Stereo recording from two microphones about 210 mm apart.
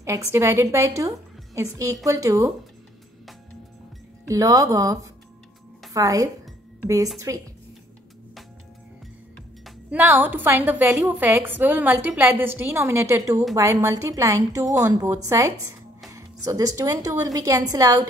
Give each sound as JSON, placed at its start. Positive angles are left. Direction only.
{"t": 0.0, "sound": "a woman's voice", "side_deg": -10}
{"t": 4.3, "sound": "a woman's voice", "side_deg": -15}
{"t": 9.7, "sound": "a woman's voice", "side_deg": -10}